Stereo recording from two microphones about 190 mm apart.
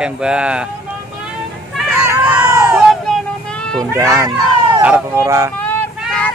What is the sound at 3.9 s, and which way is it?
Speech, 15° right (ahead or behind).